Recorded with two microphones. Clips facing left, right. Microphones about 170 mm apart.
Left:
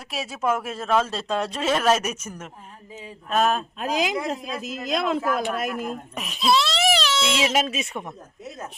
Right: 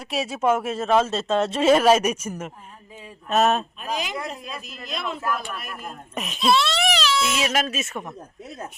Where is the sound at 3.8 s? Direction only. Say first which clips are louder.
Left 4 dB; 90° left.